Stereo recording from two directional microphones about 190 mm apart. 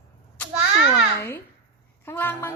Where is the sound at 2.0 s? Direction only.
10° left (ahead or behind).